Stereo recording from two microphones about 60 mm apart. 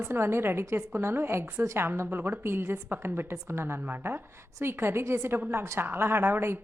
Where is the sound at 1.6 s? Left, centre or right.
Right.